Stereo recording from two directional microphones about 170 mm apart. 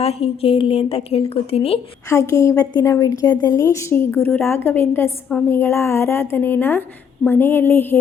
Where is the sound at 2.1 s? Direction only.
15° left (ahead or behind).